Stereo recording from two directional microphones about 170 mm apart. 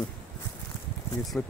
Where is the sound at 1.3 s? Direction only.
10° left (ahead or behind).